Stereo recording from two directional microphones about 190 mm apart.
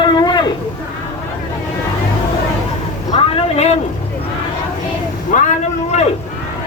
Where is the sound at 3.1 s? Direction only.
30° left (ahead or behind).